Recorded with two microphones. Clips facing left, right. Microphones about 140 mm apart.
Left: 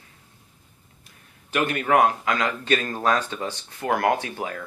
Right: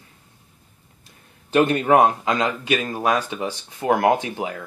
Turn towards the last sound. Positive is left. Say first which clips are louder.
# right 4 dB
turn(degrees=-15)  # may be behind; listen again after turning